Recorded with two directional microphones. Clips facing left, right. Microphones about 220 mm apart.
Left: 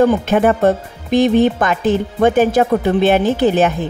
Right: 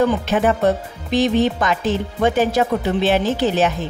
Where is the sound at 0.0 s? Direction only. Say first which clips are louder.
Left 4 dB; 50° left (ahead or behind).